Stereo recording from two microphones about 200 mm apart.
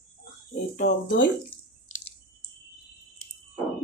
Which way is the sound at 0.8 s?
60° left (ahead or behind).